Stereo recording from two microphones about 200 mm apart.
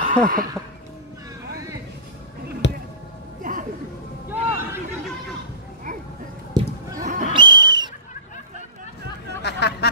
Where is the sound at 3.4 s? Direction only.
40° right (ahead or behind).